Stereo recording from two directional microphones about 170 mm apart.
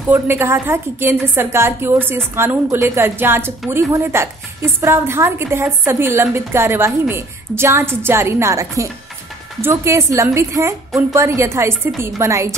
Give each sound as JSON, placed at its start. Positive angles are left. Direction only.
{"t": 0.1, "sound": "a woman's voice", "side_deg": -15}